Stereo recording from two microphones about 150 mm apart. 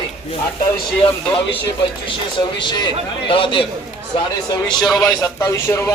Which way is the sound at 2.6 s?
30° left (ahead or behind).